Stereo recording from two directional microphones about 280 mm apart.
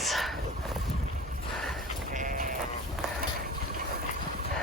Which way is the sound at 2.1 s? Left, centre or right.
Right.